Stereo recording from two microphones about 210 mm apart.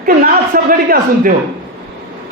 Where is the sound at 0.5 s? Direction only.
45° right (ahead or behind).